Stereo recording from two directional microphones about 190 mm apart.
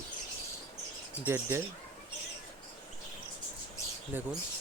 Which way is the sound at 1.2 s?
15° right (ahead or behind).